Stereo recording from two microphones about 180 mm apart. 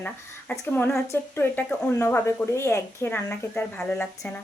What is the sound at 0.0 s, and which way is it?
A child's voice, 10° left (ahead or behind).